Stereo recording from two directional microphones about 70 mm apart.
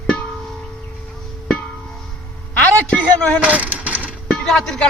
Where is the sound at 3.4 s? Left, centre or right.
Right.